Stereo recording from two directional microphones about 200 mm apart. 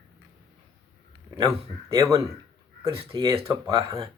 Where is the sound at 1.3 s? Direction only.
15° right (ahead or behind).